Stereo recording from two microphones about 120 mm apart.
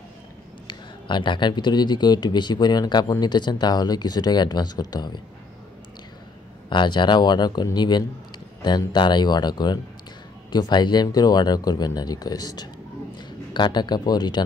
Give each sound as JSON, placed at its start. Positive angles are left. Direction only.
{"t": 0.7, "sound": "speech", "side_deg": 40}
{"t": 6.7, "sound": "speech", "side_deg": 40}